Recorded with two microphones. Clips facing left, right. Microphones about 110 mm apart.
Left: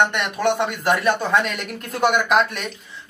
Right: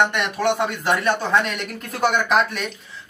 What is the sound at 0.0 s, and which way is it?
Speech, centre (ahead or behind).